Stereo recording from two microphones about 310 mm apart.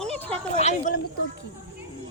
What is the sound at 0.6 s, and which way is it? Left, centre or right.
Speech, left.